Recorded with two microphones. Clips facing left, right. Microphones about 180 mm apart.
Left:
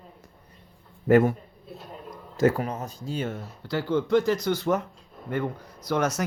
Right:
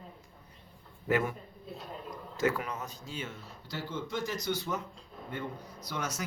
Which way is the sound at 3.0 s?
55° left (ahead or behind).